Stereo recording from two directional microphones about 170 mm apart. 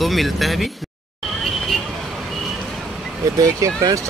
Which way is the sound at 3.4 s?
20° right (ahead or behind).